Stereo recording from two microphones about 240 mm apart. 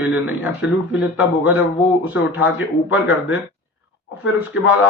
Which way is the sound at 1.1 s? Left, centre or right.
Centre.